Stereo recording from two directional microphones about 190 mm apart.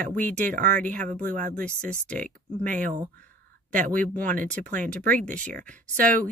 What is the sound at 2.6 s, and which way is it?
Speech, 45° right (ahead or behind).